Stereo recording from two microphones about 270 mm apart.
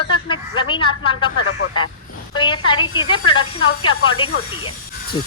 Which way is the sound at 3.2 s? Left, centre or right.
Left.